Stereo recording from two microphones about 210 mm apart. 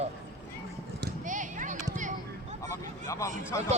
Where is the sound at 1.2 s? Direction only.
40° right (ahead or behind).